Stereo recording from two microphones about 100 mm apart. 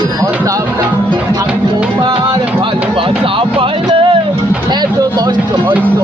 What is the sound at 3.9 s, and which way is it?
Music, 60° right (ahead or behind).